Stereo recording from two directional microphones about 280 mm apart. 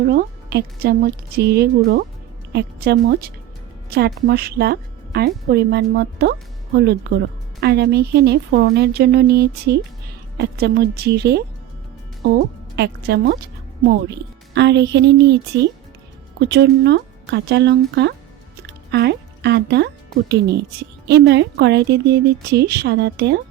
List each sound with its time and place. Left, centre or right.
0.0 s a woman's voice: right
12.7 s a woman's voice: right
14.5 s a woman's voice: right
18.6 s music: right
20.2 s a woman's voice: right